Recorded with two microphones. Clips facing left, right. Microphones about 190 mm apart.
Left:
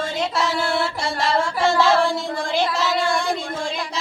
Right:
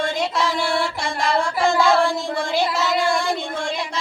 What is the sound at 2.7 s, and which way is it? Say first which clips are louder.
Child singing: right 1 dB; centre (ahead or behind).